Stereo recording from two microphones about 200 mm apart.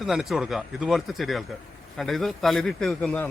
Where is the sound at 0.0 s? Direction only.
Centre (ahead or behind).